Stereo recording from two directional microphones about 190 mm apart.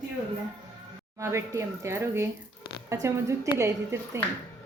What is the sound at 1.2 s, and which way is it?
A woman's voice, 15° right (ahead or behind).